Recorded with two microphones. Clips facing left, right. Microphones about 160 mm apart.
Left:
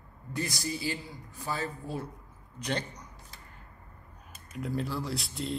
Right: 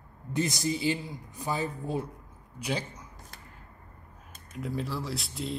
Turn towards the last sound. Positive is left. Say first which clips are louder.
# even
turn(degrees=0)  # may be behind; listen again after turning